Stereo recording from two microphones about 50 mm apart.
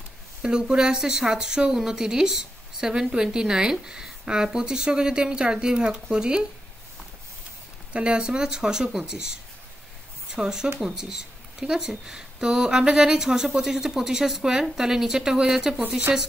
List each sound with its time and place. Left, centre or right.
0.4 s speech: centre
7.9 s speech: right
16.1 s speech: right